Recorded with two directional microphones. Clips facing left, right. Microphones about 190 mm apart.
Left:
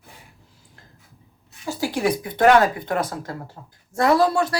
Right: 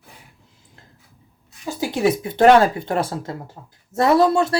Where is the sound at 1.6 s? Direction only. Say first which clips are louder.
Right 3 dB; 20° right (ahead or behind).